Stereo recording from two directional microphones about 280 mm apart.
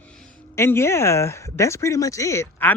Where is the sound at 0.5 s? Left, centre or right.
Centre.